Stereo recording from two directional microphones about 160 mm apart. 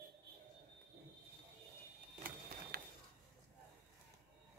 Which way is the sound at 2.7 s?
75° right (ahead or behind).